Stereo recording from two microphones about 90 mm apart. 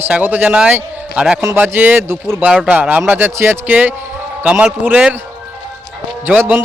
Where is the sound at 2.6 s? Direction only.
15° right (ahead or behind).